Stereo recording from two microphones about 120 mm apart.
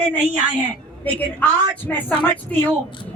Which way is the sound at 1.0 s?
15° left (ahead or behind).